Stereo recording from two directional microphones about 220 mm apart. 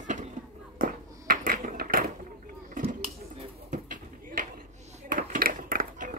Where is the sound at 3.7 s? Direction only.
35° right (ahead or behind).